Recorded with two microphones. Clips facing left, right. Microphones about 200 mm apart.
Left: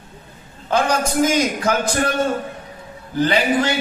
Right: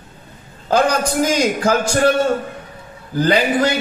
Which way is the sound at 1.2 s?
35° right (ahead or behind).